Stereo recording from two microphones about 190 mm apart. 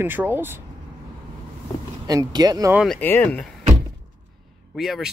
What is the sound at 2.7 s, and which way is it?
Speech, centre (ahead or behind).